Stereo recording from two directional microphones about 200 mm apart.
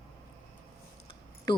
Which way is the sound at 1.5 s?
25° left (ahead or behind).